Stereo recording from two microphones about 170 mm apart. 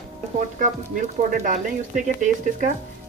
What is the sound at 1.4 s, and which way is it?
Speech, 50° right (ahead or behind).